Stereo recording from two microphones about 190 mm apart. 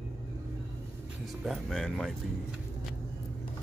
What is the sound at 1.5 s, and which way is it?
Speech, centre (ahead or behind).